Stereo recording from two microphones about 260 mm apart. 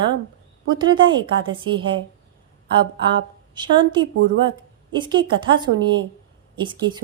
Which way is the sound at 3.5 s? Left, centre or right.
Centre.